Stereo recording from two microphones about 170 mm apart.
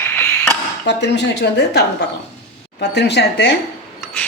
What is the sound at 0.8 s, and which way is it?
A woman's voice, 90° left.